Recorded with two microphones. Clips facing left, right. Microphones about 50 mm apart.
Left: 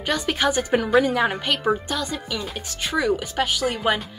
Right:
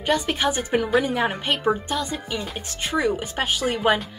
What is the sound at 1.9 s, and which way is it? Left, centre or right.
A woman's voice, right.